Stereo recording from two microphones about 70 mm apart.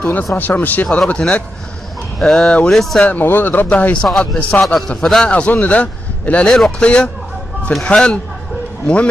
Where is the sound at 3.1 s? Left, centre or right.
Left.